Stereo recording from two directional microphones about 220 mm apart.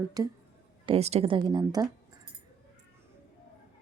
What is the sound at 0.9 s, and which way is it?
A woman's voice, 30° right (ahead or behind).